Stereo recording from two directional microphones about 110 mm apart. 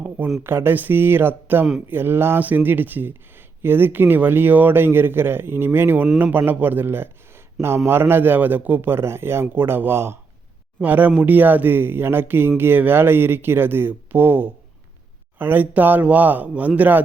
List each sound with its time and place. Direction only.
0.4 s a man's voice: 20° right (ahead or behind)